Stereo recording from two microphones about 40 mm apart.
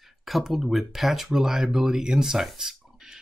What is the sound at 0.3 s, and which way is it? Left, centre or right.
Speech, centre.